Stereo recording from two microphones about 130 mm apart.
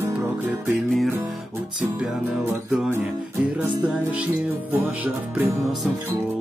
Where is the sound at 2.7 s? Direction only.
5° right (ahead or behind).